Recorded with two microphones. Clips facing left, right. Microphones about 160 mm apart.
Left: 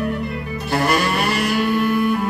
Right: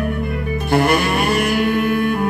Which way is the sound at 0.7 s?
55° right (ahead or behind).